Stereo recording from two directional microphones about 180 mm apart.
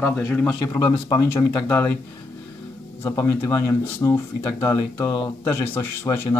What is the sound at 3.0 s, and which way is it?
Speech, 15° left (ahead or behind).